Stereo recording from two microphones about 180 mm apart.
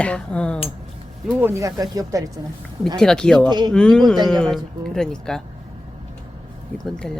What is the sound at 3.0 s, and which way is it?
Speech, 5° left (ahead or behind).